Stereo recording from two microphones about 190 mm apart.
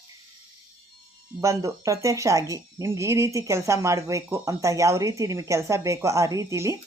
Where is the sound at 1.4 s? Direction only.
15° right (ahead or behind).